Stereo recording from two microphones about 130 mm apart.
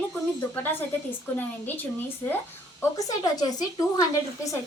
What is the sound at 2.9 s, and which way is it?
Speech, 30° left (ahead or behind).